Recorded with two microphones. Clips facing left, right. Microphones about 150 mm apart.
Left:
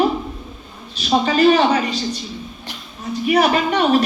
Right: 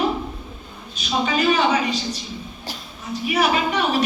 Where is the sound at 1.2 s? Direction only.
40° left (ahead or behind).